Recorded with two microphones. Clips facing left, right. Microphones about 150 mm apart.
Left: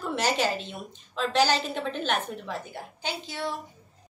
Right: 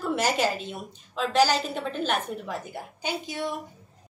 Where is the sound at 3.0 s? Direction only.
20° right (ahead or behind).